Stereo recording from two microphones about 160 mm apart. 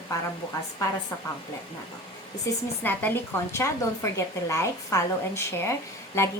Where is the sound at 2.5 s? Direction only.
20° left (ahead or behind).